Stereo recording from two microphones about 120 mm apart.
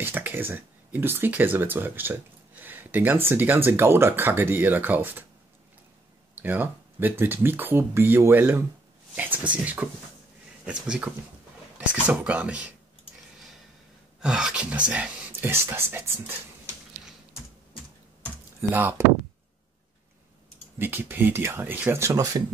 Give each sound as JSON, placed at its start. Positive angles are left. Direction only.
{"t": 0.0, "sound": "speech", "side_deg": -20}
{"t": 6.3, "sound": "speech", "side_deg": -15}
{"t": 14.2, "sound": "speech", "side_deg": -5}
{"t": 18.6, "sound": "speech", "side_deg": -20}
{"t": 20.8, "sound": "speech", "side_deg": -15}